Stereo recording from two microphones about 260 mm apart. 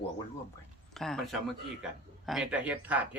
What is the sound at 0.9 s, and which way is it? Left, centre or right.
A man's voice, centre.